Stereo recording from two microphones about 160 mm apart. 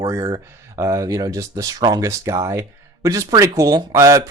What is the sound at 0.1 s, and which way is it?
Speech, 25° right (ahead or behind).